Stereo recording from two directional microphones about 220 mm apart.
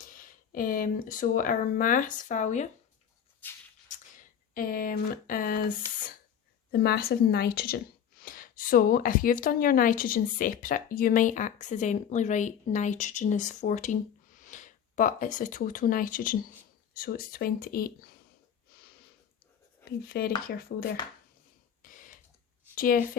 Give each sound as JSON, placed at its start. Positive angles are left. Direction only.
{"t": 0.0, "sound": "speech", "side_deg": 40}
{"t": 3.4, "sound": "music", "side_deg": 10}
{"t": 4.5, "sound": "a woman's voice", "side_deg": 40}
{"t": 18.7, "sound": "a sound", "side_deg": 45}
{"t": 19.8, "sound": "speech", "side_deg": 45}
{"t": 21.8, "sound": "a sound", "side_deg": 35}
{"t": 22.7, "sound": "a woman's voice", "side_deg": 40}